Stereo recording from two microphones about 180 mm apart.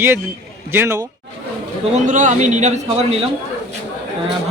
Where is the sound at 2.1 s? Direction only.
45° right (ahead or behind).